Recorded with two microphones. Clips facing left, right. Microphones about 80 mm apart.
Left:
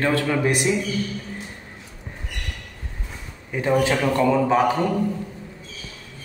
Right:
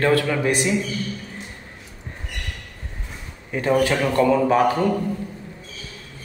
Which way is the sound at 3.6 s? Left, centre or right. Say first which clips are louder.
Right 1 dB; centre.